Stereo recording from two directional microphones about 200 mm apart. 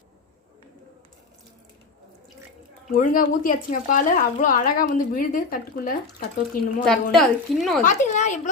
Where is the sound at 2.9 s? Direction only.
40° left (ahead or behind).